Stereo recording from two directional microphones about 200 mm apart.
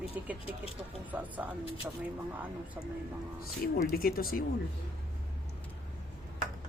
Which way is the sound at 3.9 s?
50° left (ahead or behind).